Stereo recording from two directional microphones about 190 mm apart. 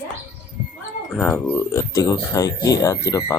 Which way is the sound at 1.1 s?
10° left (ahead or behind).